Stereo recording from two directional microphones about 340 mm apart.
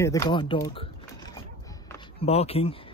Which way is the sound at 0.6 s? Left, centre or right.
Centre.